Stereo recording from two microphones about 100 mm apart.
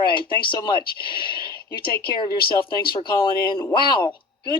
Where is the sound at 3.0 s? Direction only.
55° left (ahead or behind).